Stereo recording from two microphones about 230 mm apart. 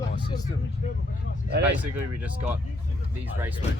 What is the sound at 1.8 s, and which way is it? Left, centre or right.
Speech, centre.